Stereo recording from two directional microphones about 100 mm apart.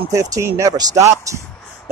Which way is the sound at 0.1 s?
30° right (ahead or behind).